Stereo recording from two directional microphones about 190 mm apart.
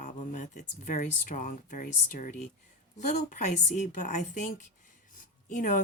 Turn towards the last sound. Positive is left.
turn(degrees=45)  # may be behind; listen again after turning